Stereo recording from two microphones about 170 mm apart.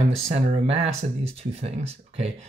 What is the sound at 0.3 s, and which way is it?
Speech, 40° right (ahead or behind).